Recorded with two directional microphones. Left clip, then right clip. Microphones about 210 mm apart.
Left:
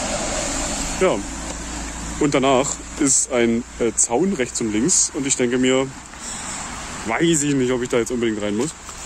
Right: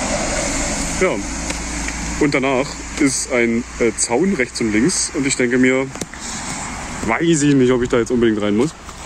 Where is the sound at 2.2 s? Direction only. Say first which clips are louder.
Even; 15° left (ahead or behind).